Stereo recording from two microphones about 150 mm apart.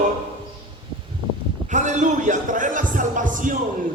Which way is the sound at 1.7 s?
55° right (ahead or behind).